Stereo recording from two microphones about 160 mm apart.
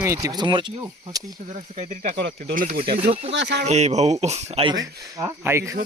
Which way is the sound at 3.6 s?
45° right (ahead or behind).